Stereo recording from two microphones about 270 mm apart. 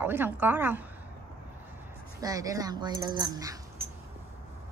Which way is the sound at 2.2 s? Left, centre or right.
Centre.